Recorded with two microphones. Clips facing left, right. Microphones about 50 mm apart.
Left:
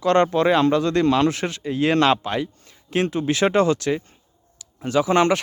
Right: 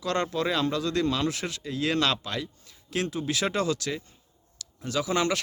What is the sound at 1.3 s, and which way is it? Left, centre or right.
Speech, left.